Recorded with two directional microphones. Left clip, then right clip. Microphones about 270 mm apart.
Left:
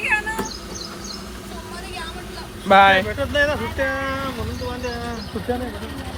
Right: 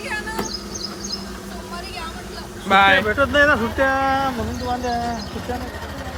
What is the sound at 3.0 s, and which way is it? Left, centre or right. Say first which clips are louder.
Speech: right 5 dB; right.